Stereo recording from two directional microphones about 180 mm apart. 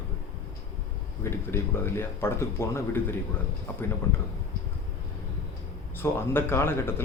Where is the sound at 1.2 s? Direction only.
15° left (ahead or behind).